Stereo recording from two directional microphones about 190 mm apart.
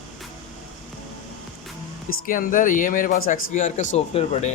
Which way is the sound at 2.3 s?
45° left (ahead or behind).